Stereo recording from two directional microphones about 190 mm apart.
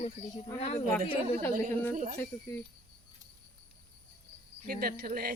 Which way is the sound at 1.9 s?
40° right (ahead or behind).